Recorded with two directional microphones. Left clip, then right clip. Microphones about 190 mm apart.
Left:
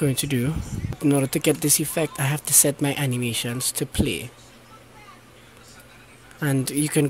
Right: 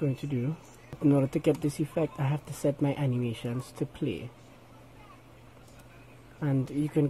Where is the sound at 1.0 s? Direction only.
10° left (ahead or behind).